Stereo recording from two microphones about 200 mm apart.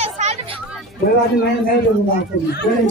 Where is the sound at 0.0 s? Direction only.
35° right (ahead or behind).